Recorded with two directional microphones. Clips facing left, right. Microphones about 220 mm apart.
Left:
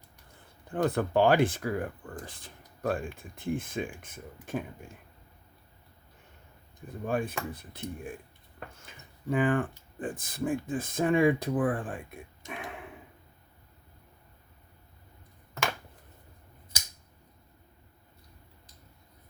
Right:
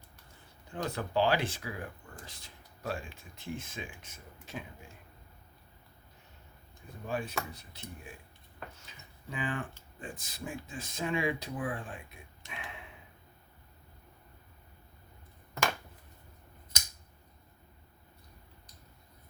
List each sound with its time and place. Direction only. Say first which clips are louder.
0.7 s speech: left 7 dB; 55° left (ahead or behind)
7.0 s speech: left 5 dB; 50° left (ahead or behind)